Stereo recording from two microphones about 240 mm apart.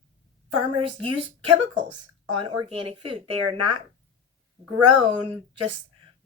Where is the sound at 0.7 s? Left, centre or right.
Right.